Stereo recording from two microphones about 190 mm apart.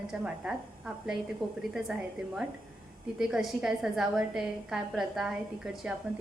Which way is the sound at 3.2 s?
Centre (ahead or behind).